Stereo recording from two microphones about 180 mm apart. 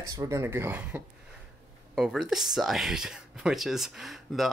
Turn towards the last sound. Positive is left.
turn(degrees=0)  # may be behind; listen again after turning